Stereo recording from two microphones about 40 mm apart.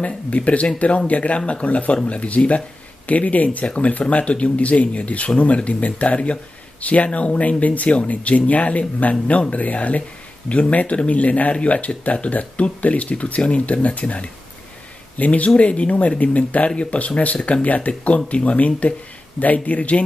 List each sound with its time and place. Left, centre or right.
0.0 s speech: left